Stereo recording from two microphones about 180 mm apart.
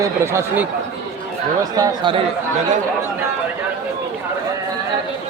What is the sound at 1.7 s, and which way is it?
Speech, 25° right (ahead or behind).